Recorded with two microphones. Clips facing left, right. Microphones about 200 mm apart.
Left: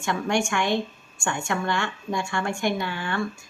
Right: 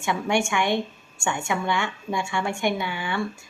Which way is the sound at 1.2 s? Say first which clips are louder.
Right 1 dB; 5° right (ahead or behind).